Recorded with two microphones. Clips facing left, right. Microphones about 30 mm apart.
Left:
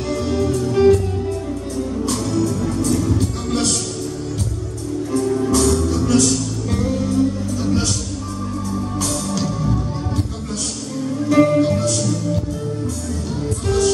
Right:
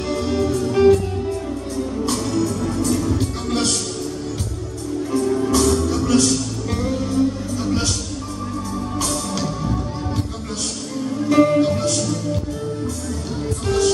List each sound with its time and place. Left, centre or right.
0.3 s music: centre
2.0 s music: centre
5.2 s music: centre
8.9 s music: centre
11.2 s music: centre